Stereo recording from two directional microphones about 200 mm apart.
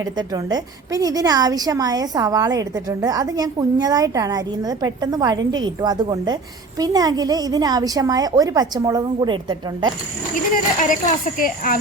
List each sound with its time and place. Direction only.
0.0 s a woman's voice: 20° right (ahead or behind)
10.5 s speech: 40° left (ahead or behind)